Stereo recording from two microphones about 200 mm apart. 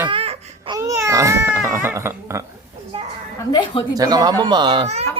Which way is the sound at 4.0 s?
20° right (ahead or behind).